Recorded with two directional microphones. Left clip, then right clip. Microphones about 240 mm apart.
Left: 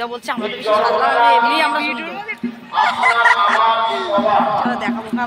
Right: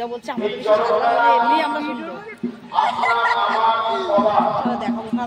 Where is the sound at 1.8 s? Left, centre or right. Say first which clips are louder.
Left 5 dB; right.